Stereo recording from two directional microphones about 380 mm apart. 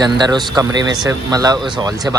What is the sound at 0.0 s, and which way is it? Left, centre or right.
Speech, centre.